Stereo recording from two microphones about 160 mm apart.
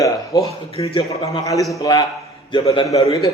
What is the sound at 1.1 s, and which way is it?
A man's voice, 20° left (ahead or behind).